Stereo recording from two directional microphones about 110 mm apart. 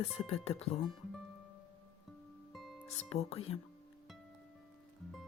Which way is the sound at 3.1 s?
65° left (ahead or behind).